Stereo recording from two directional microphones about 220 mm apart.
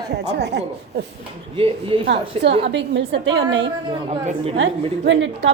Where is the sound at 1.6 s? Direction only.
25° right (ahead or behind).